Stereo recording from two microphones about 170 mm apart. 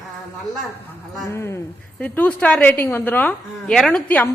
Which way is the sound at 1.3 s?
15° left (ahead or behind).